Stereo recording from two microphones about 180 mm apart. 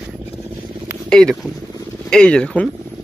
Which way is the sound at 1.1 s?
5° left (ahead or behind).